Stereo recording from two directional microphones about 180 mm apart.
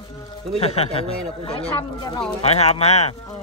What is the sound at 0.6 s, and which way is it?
Speech, 35° left (ahead or behind).